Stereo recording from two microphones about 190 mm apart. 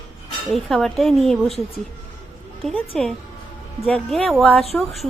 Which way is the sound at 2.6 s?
Centre (ahead or behind).